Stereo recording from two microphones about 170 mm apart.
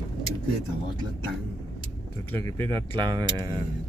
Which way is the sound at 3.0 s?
25° right (ahead or behind).